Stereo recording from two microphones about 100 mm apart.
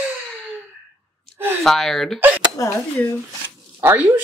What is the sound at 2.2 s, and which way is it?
Speech, 20° right (ahead or behind).